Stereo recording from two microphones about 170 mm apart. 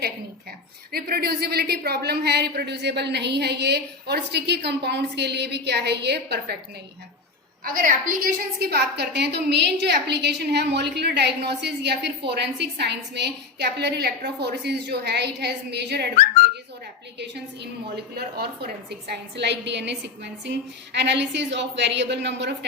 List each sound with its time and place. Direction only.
0.9 s a woman's voice: 65° right (ahead or behind)
7.6 s a woman's voice: 55° right (ahead or behind); by 16.0 s 80° right
17.2 s a woman's voice: 80° right